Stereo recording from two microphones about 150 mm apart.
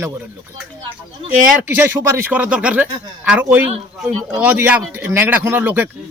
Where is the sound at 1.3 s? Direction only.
10° right (ahead or behind).